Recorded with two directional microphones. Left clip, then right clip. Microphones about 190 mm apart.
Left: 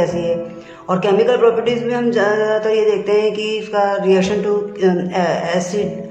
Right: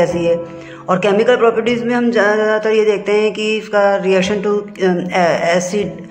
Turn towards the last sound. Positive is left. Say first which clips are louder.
# right 4 dB
turn(degrees=-15)  # may be behind; listen again after turning